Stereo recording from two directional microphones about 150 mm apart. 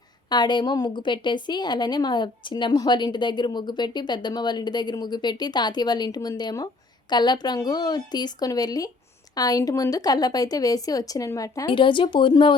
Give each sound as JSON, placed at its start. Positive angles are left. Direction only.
{"t": 0.3, "sound": "a woman's voice", "side_deg": 30}
{"t": 11.7, "sound": "speech", "side_deg": 35}